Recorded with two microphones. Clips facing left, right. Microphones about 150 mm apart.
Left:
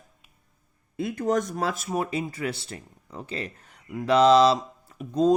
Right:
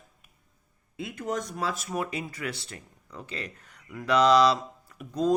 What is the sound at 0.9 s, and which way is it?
Speech, 50° left (ahead or behind).